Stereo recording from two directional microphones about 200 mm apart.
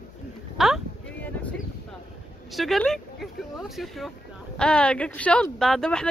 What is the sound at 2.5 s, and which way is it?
Speech, centre (ahead or behind).